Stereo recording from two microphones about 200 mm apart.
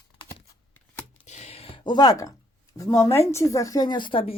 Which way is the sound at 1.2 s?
35° left (ahead or behind).